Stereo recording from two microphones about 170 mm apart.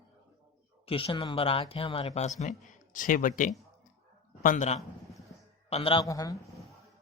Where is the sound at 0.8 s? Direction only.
35° left (ahead or behind).